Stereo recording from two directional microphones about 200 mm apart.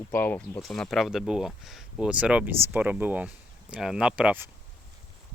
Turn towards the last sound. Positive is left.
turn(degrees=-10)  # may be behind; listen again after turning